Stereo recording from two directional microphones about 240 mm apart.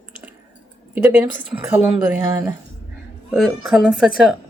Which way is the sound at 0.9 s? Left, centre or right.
Centre.